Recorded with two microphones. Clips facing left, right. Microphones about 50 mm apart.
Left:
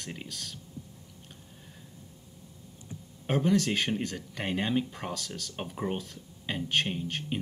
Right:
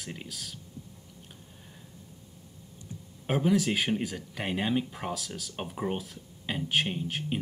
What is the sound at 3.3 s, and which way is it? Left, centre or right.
Speech, centre.